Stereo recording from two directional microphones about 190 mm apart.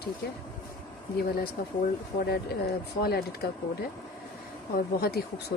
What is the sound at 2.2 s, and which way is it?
Speech, 55° left (ahead or behind).